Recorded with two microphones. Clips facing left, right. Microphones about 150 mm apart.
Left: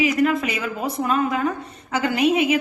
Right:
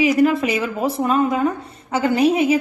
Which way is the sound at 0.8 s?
Centre (ahead or behind).